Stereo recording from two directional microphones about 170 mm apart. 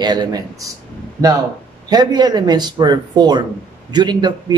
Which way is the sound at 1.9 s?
25° right (ahead or behind).